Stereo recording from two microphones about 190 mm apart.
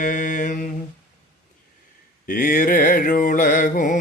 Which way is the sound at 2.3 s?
45° left (ahead or behind).